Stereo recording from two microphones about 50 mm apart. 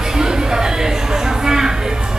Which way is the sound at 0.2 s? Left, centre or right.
Centre.